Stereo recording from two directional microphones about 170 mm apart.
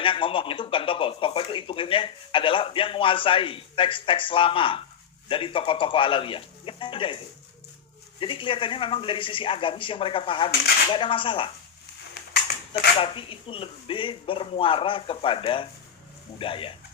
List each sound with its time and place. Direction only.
0.0 s speech: 30° left (ahead or behind)
8.2 s speech: 30° left (ahead or behind)
12.2 s a sound: 75° left (ahead or behind)
13.0 s speech: 30° left (ahead or behind)